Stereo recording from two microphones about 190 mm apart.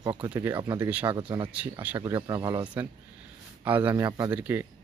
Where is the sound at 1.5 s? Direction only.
10° right (ahead or behind).